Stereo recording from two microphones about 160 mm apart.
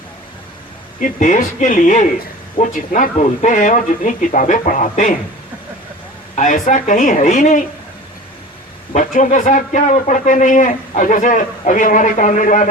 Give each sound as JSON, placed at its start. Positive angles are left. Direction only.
{"t": 0.9, "sound": "a man's voice", "side_deg": 55}
{"t": 6.3, "sound": "a man's voice", "side_deg": 50}
{"t": 8.9, "sound": "a man's voice", "side_deg": 50}